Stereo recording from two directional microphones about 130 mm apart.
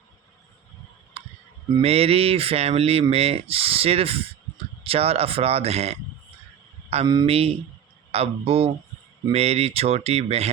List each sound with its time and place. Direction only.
1.8 s speech: 50° right (ahead or behind)